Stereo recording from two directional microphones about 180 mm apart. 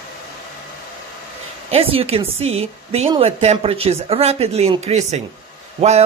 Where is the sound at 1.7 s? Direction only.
30° right (ahead or behind).